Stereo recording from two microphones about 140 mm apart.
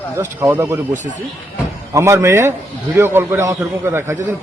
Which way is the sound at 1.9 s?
20° right (ahead or behind).